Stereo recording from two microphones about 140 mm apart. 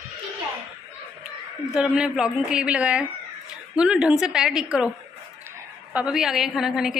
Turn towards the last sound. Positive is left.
turn(degrees=-5)  # may be behind; listen again after turning